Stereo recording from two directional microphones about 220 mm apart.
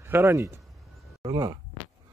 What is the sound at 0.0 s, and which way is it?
Speech, 10° right (ahead or behind).